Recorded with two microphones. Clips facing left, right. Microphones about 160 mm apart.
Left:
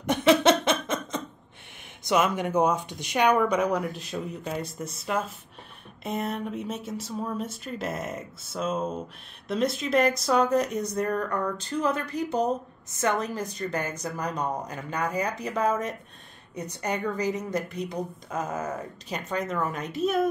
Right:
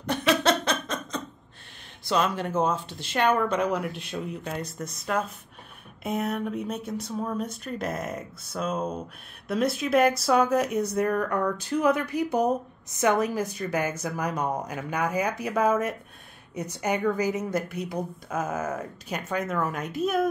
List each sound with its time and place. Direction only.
0.0 s laughter: 20° left (ahead or behind)
2.0 s speech: 15° left (ahead or behind)
3.7 s a woman's voice: centre (ahead or behind)